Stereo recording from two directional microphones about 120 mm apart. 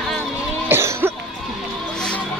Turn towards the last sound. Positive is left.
turn(degrees=-20)  # may be behind; listen again after turning